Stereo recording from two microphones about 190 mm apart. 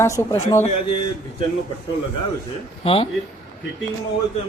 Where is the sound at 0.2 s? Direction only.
15° left (ahead or behind).